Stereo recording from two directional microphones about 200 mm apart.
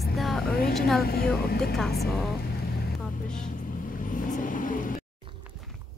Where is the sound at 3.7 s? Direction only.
45° left (ahead or behind).